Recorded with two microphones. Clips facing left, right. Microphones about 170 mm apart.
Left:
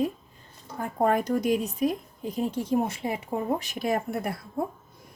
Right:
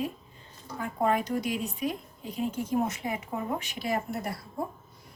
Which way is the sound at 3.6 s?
45° left (ahead or behind).